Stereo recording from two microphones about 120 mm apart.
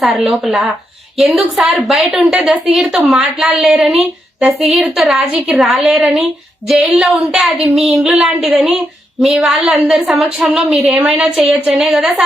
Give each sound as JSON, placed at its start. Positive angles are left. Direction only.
{"t": 0.3, "sound": "a woman's voice", "side_deg": 0}